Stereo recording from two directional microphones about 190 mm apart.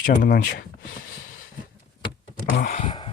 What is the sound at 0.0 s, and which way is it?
Speech, 45° left (ahead or behind).